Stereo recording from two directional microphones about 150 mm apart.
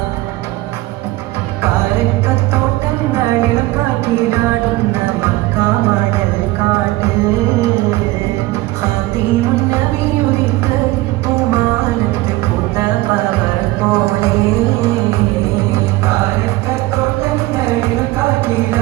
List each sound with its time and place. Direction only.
13.9 s music: 20° right (ahead or behind)